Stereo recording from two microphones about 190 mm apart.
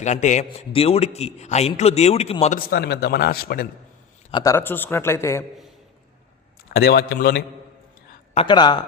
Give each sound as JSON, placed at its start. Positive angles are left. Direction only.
{"t": 0.0, "sound": "a man's voice", "side_deg": 40}
{"t": 2.6, "sound": "a man's voice", "side_deg": 55}
{"t": 4.3, "sound": "a man's voice", "side_deg": 25}
{"t": 4.5, "sound": "a man's voice", "side_deg": 10}
{"t": 6.7, "sound": "speech", "side_deg": 55}
{"t": 8.4, "sound": "a woman's voice", "side_deg": 25}